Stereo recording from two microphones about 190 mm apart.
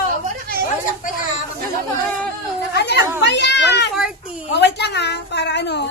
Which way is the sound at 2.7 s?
60° left (ahead or behind).